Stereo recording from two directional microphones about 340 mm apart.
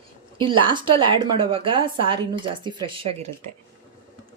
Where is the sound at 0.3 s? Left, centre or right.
Centre.